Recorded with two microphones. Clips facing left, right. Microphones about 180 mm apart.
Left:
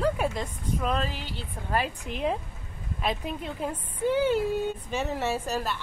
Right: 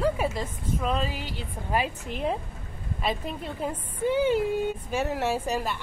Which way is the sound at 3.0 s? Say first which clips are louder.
Even; centre (ahead or behind).